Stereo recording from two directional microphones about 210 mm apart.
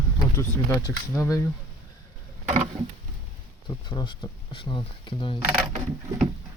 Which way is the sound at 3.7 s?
20° left (ahead or behind).